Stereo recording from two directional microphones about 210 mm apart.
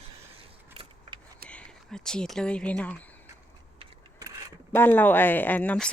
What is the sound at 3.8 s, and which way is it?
Vehicle, 15° right (ahead or behind).